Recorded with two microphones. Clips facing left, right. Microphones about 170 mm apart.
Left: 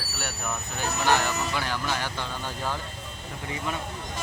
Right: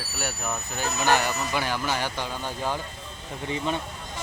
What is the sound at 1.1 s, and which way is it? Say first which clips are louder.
Speech: right 1 dB; 15° right (ahead or behind).